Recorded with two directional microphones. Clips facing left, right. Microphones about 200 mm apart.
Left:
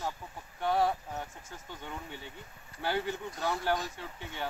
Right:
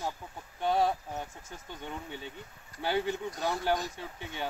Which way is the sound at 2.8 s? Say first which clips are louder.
Right 2 dB; 15° right (ahead or behind).